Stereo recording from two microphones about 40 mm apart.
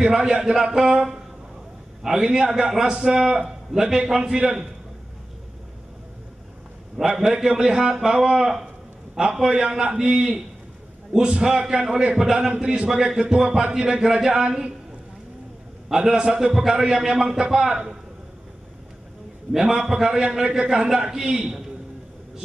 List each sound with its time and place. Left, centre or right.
0.1 s speech: centre
2.0 s a man's voice: centre
7.1 s a man's voice: centre
15.9 s a man's voice: centre
19.5 s a man's voice: centre